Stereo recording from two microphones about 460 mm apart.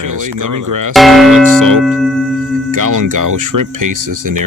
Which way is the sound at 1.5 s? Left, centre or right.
Right.